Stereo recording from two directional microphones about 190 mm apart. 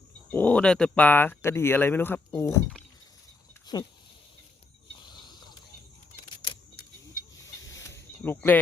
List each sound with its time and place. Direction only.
0.3 s speech: 10° left (ahead or behind)
3.7 s speech: 20° left (ahead or behind)
5.0 s a sound: 20° left (ahead or behind)
7.4 s snake: 15° left (ahead or behind)